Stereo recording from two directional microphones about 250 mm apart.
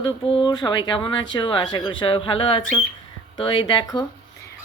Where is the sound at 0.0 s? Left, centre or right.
Centre.